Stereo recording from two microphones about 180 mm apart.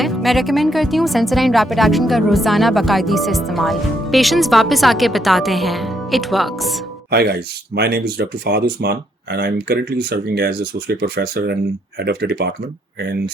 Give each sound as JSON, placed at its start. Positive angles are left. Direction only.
{"t": 0.0, "sound": "speech", "side_deg": 0}
{"t": 7.1, "sound": "speech", "side_deg": -60}